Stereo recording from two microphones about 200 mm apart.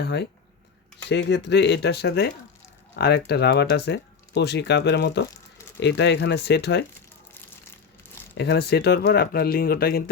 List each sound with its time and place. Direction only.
0.0 s speech: 55° left (ahead or behind)
8.4 s speech: 55° left (ahead or behind)